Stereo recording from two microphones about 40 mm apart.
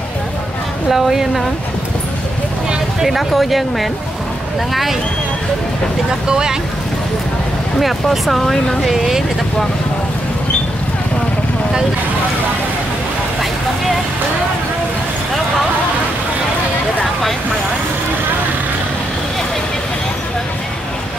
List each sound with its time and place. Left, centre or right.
0.8 s speech: centre
3.0 s speech: centre
6.2 s speech: centre
7.8 s speech: centre
8.8 s speech: centre